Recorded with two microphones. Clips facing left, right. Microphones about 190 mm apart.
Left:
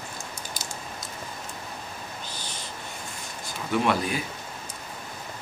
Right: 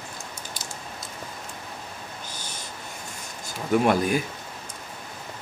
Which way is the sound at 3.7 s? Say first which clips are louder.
Right 4 dB; 45° right (ahead or behind).